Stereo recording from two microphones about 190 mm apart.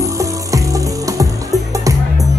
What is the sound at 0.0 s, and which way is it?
Music, 15° right (ahead or behind).